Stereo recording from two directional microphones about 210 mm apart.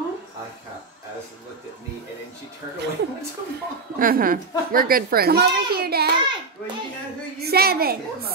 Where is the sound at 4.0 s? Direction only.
40° right (ahead or behind).